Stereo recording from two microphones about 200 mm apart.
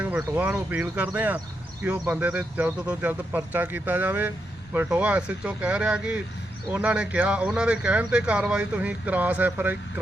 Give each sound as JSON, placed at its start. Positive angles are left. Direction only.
{"t": 0.0, "sound": "speech", "side_deg": -5}